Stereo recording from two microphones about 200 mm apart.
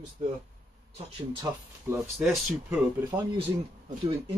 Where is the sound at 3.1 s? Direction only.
25° right (ahead or behind).